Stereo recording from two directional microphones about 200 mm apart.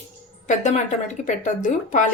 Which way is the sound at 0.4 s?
35° left (ahead or behind).